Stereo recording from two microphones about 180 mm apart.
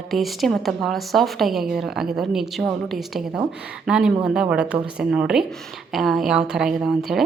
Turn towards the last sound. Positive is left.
turn(degrees=0)  # may be behind; listen again after turning